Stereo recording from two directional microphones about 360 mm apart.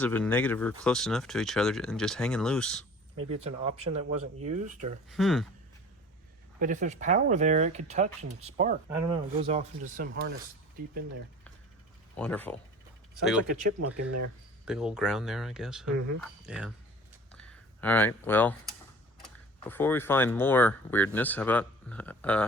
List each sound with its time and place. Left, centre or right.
0.0 s speech: centre
3.2 s speech: right
3.4 s speech: centre
5.0 s speech: centre
6.6 s speech: right
12.1 s speech: centre
13.7 s speech: right
14.6 s speech: centre
17.3 s a sound: centre
19.2 s speech: centre